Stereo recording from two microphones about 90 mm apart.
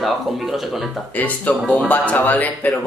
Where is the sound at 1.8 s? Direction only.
20° left (ahead or behind).